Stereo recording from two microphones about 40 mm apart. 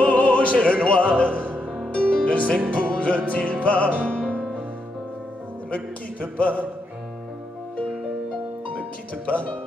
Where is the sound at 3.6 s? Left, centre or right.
Left.